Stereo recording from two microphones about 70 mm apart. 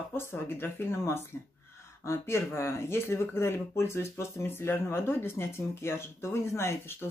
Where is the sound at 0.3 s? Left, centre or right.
Left.